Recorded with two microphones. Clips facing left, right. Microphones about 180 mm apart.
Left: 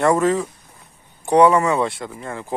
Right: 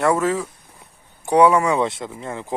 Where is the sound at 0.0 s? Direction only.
5° right (ahead or behind); by 2.6 s 20° right (ahead or behind).